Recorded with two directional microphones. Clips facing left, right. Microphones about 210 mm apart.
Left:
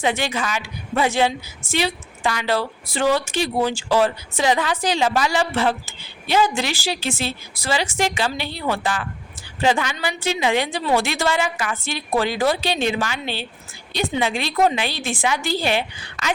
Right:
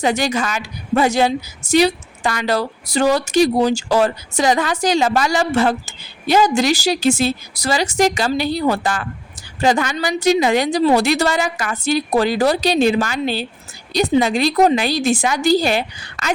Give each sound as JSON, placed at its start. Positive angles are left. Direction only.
{"t": 0.0, "sound": "a woman's voice", "side_deg": -40}